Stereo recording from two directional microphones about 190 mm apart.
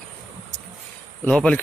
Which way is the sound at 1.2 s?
5° left (ahead or behind).